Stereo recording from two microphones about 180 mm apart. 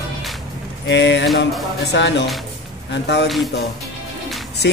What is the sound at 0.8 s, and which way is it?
Speech, 80° left.